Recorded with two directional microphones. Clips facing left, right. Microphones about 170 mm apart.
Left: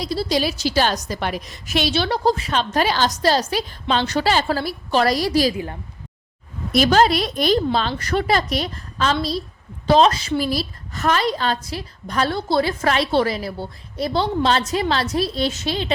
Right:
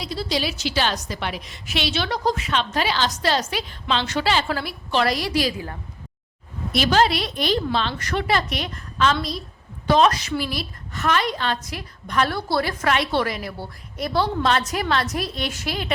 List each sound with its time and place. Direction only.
0.0 s a woman's voice: 40° left (ahead or behind)
6.7 s a woman's voice: 45° left (ahead or behind)
12.3 s a woman's voice: 20° left (ahead or behind)